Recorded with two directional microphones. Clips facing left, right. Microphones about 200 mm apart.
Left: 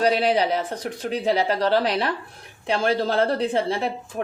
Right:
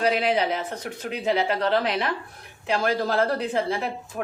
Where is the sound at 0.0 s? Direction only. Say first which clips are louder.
Left 3 dB; 35° left (ahead or behind).